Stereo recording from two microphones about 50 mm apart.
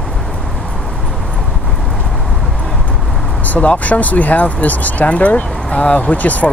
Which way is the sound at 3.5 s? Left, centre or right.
Left.